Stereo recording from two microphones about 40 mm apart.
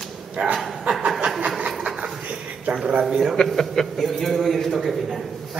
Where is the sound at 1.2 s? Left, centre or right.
Centre.